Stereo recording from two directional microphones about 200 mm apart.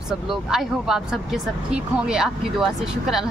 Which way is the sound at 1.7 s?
5° right (ahead or behind).